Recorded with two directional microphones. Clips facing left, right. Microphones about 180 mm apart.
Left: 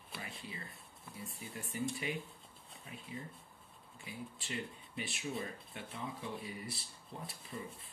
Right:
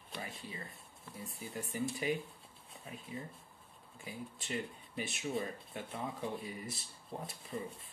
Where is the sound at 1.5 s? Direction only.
40° right (ahead or behind).